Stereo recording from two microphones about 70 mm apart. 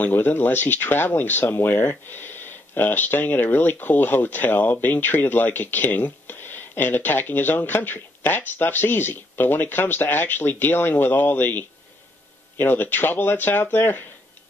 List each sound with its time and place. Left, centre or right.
0.0 s speech: left